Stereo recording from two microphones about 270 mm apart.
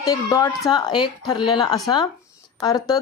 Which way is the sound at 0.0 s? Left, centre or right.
Centre.